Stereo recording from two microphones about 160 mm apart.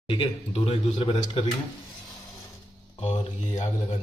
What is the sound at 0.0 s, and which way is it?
A man's voice, 35° left (ahead or behind).